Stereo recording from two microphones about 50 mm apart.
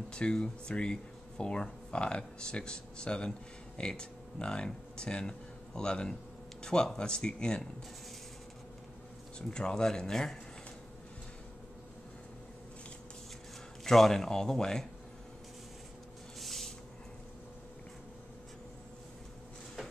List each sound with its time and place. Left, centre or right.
0.1 s speech: centre
9.5 s speech: centre
13.8 s speech: centre
16.3 s spray: centre